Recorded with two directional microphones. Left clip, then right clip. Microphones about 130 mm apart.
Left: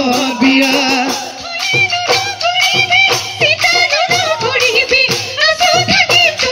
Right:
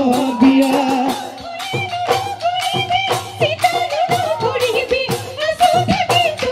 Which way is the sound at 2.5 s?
50° right (ahead or behind).